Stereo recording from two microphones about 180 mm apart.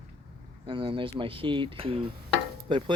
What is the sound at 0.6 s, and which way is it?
Speech, 30° right (ahead or behind).